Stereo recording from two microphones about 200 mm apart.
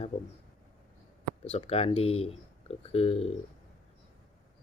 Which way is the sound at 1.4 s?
30° left (ahead or behind).